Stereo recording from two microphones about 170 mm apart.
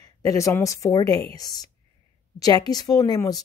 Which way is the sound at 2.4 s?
20° left (ahead or behind).